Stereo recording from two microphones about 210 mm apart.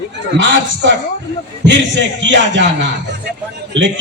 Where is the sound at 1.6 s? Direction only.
60° right (ahead or behind).